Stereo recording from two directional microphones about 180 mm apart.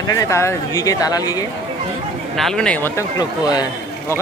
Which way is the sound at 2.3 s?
Centre (ahead or behind).